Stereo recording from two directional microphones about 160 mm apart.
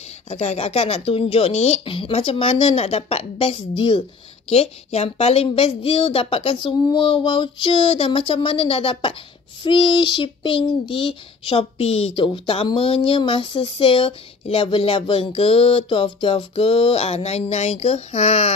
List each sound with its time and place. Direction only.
0.3 s speech: 45° left (ahead or behind)